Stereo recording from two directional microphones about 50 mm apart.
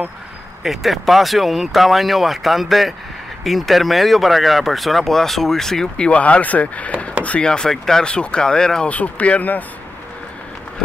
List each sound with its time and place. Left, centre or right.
0.7 s speech: centre
5.9 s speech: left
7.4 s speech: centre
8.8 s speech: left